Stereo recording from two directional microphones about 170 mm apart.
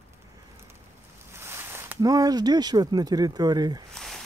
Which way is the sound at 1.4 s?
15° right (ahead or behind).